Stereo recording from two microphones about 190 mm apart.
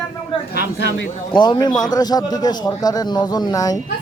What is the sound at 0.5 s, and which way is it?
Speech, 70° left (ahead or behind).